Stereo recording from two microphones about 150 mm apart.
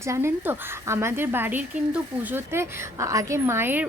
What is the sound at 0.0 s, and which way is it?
Speech, 15° right (ahead or behind).